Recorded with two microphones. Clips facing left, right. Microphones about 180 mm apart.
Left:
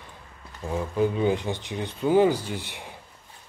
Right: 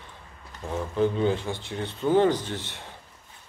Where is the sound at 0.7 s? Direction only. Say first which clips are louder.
Even; 10° left (ahead or behind).